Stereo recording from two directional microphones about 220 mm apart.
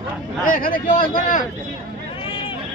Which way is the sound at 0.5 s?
40° left (ahead or behind).